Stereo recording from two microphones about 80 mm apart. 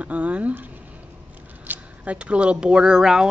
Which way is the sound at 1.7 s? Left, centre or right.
Centre.